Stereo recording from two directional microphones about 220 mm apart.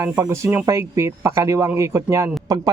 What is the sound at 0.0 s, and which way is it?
Speech, 15° right (ahead or behind).